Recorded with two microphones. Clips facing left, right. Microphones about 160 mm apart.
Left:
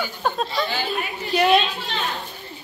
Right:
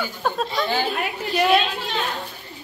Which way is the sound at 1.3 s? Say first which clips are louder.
Left 1 dB; centre (ahead or behind).